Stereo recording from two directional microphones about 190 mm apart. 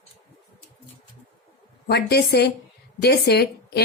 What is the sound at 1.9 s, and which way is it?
A woman's voice, 60° left (ahead or behind).